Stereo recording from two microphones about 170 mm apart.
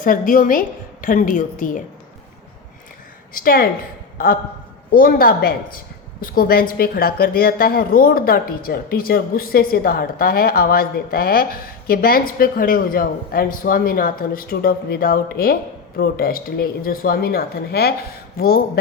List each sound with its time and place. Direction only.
0.0 s a woman's voice: 50° left (ahead or behind)
3.3 s a woman's voice: 60° left (ahead or behind)
4.9 s a woman's voice: 60° left (ahead or behind)